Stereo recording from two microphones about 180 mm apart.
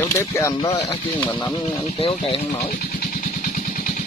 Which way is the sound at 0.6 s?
25° left (ahead or behind).